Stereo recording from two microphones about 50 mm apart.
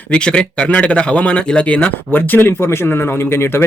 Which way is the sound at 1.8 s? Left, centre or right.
Left.